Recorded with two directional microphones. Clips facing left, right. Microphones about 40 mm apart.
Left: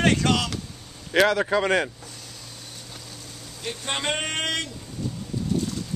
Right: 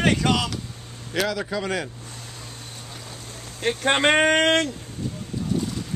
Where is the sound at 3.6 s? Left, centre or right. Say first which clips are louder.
Right 9 dB; right.